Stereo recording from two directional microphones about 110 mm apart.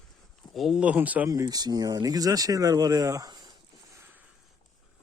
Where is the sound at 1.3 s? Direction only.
35° right (ahead or behind).